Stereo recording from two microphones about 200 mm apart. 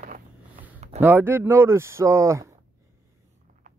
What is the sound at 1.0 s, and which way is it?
Speech, 10° right (ahead or behind).